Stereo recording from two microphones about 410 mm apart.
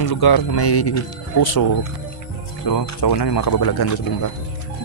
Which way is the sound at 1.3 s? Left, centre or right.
Left.